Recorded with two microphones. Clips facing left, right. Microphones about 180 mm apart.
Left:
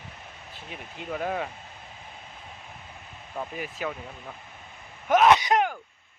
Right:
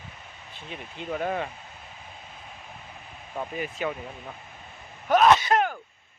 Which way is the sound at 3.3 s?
Centre (ahead or behind).